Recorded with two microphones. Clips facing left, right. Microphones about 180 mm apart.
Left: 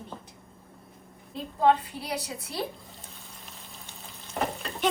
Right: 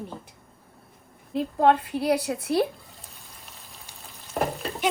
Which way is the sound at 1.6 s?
60° right (ahead or behind).